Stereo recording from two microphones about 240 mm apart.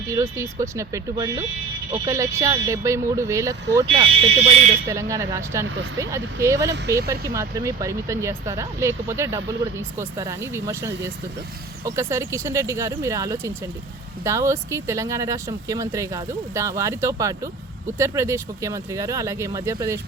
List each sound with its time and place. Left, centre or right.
0.1 s speech: centre
4.9 s speech: centre